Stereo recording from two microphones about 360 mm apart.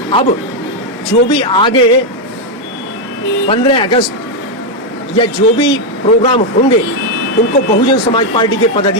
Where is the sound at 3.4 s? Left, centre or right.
Centre.